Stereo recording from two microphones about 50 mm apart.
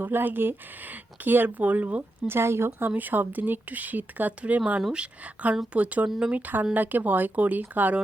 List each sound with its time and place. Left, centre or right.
0.0 s speech: right
2.2 s speech: right
2.9 s speech: right